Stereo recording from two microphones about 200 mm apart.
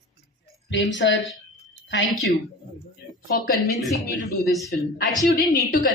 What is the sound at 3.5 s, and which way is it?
Speech, 50° left (ahead or behind).